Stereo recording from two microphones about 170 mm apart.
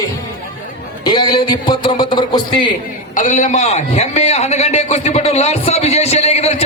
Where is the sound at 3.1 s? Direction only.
50° left (ahead or behind).